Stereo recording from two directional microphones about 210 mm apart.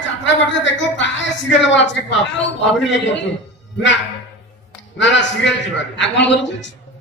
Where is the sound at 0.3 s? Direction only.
60° left (ahead or behind).